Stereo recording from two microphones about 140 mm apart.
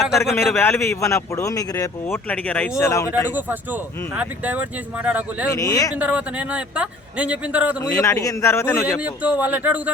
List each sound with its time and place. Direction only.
0.2 s speech: 20° left (ahead or behind)
2.7 s speech: 20° left (ahead or behind)
3.3 s a man's voice: 10° right (ahead or behind)
5.5 s speech: 25° left (ahead or behind)
6.0 s a man's voice: 10° right (ahead or behind)
7.8 s speech: 20° left (ahead or behind)
9.0 s a man's voice: 10° right (ahead or behind)